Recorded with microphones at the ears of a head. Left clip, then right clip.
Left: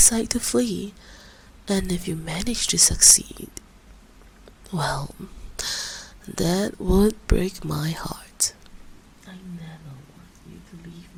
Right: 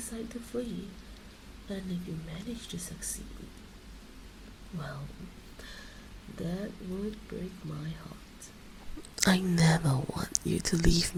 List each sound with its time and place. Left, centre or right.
0.0 s speech: left
4.7 s speech: left
9.1 s speech: right